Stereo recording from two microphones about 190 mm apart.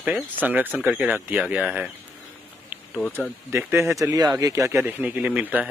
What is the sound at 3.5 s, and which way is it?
Speech, 15° right (ahead or behind).